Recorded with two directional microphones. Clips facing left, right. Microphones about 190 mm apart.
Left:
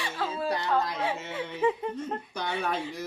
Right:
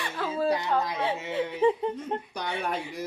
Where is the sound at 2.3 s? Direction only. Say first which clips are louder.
Left 4 dB; 15° right (ahead or behind).